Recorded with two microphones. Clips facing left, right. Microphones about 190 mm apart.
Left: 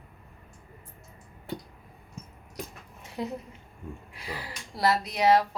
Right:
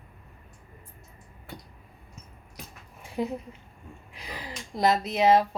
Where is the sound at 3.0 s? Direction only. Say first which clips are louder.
Right 4 dB; 15° right (ahead or behind).